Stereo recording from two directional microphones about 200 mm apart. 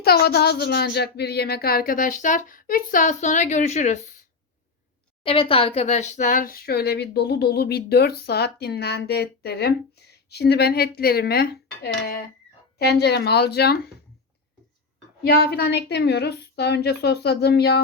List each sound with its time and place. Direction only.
0.0 s speech: 50° left (ahead or behind); by 4.0 s 35° left (ahead or behind)
5.2 s speech: 25° left (ahead or behind); by 13.9 s 55° left (ahead or behind)
15.2 s a woman's voice: 50° left (ahead or behind)